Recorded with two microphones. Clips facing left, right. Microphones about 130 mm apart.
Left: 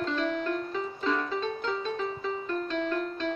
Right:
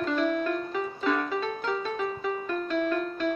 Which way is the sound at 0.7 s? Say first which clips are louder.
Right 2 dB; 10° right (ahead or behind).